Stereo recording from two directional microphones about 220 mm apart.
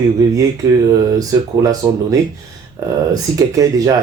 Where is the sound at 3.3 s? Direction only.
15° right (ahead or behind).